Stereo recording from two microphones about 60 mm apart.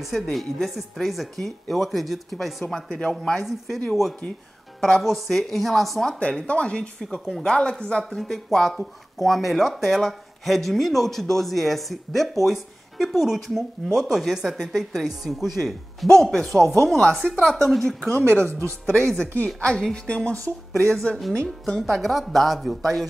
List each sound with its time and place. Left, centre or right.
0.0 s speech: centre
6.1 s speech: centre
7.0 s speech: centre
8.2 s speech: centre
16.1 s speech: centre